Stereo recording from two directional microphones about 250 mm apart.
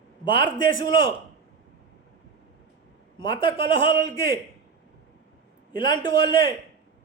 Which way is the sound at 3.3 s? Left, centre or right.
Centre.